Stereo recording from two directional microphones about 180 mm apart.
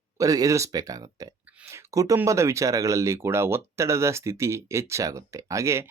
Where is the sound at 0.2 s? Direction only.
20° right (ahead or behind).